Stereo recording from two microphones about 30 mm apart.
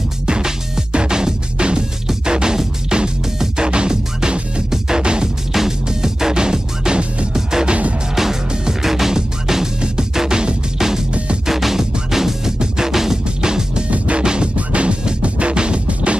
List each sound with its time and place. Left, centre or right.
0.3 s music: right
5.0 s music: right
5.5 s music: centre
7.6 s music: right
8.8 s music: centre
13.4 s music: right
13.8 s music: right
14.2 s music: right
14.7 s music: right